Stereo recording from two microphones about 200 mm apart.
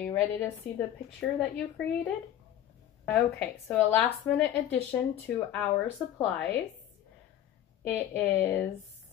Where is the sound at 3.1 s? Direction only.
10° left (ahead or behind).